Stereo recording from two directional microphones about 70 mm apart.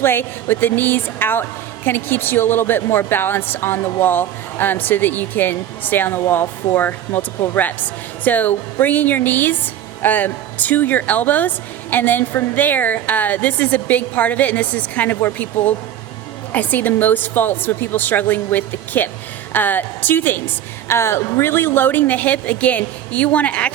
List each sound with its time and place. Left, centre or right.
0.0 s a woman's voice: left